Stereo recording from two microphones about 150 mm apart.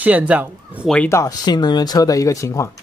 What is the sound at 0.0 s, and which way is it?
Speech, 10° right (ahead or behind).